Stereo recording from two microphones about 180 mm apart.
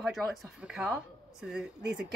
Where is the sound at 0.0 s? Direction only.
Centre (ahead or behind).